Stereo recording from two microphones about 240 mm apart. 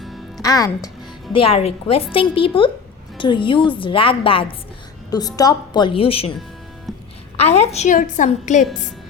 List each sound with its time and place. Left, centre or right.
0.0 s music: centre
0.4 s a woman's voice: centre
6.9 s music: centre
7.3 s a woman's voice: left